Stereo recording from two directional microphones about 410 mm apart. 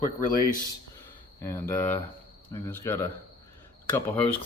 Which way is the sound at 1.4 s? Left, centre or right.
Centre.